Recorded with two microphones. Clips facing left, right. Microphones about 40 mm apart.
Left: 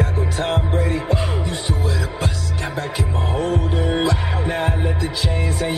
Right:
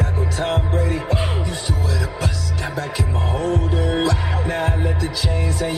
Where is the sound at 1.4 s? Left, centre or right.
Left.